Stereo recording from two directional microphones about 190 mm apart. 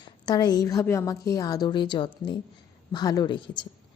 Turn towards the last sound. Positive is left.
turn(degrees=25)  # may be behind; listen again after turning